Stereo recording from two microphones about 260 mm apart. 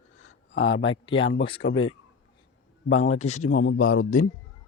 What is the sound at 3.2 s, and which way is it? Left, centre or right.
Speech, left.